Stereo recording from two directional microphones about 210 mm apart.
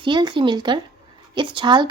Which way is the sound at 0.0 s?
20° right (ahead or behind).